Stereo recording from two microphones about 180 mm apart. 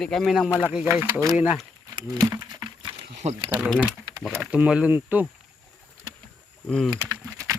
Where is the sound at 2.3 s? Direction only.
20° right (ahead or behind).